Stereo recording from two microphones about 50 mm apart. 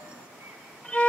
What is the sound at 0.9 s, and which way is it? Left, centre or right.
Music, left.